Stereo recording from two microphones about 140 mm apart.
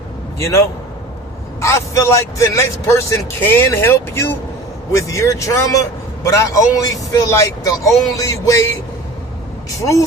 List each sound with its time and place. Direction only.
0.3 s a man's voice: 20° left (ahead or behind)
1.6 s speech: 25° left (ahead or behind)
9.6 s speech: 25° left (ahead or behind)